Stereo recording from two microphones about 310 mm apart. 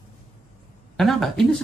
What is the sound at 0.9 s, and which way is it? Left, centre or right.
Speech, centre.